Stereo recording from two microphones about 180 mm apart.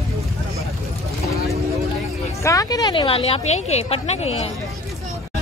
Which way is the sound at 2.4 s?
20° left (ahead or behind).